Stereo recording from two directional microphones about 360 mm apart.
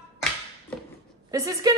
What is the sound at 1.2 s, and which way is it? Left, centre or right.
Speech, centre.